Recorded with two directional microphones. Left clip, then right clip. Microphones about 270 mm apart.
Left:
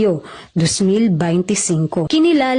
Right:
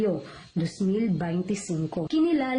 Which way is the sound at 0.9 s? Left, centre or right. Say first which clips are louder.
Left 12 dB; left.